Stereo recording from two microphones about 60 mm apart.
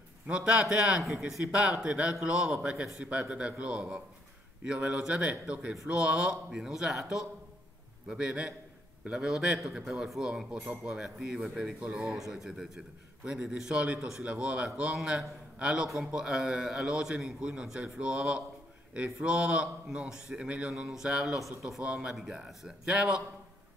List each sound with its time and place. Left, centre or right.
0.3 s a man's voice: centre
12.2 s a man's voice: centre
14.2 s a man's voice: right
20.7 s a man's voice: centre